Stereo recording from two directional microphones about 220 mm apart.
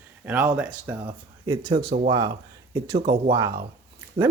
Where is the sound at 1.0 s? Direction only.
20° right (ahead or behind).